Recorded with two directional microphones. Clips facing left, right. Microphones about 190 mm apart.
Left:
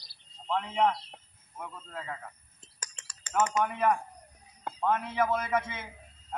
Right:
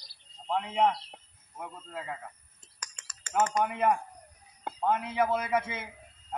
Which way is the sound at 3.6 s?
15° right (ahead or behind).